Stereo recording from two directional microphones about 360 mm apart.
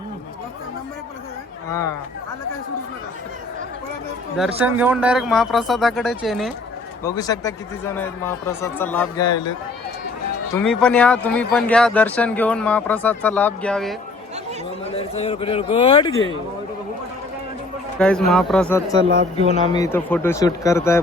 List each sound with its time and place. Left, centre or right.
1.7 s speech: centre
4.4 s speech: centre
10.5 s speech: centre
14.9 s speech: centre
18.3 s speech: centre